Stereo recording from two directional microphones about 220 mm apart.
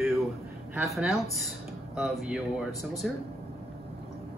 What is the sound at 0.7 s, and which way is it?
Speech, centre (ahead or behind).